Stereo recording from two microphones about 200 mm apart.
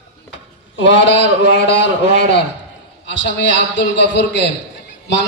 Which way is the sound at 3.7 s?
65° left (ahead or behind).